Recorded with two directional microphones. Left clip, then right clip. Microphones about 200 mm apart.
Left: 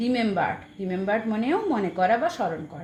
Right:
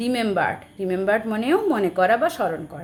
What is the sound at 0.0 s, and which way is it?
A woman's voice, 20° right (ahead or behind).